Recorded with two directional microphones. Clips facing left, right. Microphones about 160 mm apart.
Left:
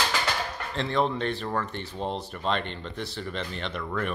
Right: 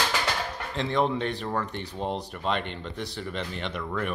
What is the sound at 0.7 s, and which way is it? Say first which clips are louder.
Speech: right 1 dB; 15° right (ahead or behind).